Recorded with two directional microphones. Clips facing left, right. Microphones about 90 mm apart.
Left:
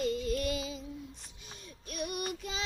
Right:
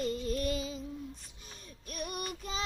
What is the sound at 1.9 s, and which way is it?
Child singing, 40° right (ahead or behind).